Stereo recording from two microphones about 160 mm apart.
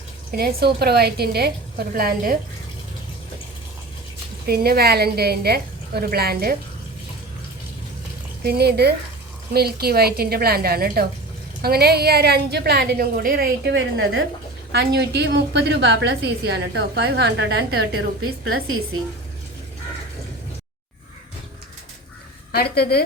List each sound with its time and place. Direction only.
0.3 s a woman's voice: 75° right (ahead or behind)
4.4 s a woman's voice: 75° right (ahead or behind)
8.4 s a woman's voice: 90° right
22.5 s speech: 80° left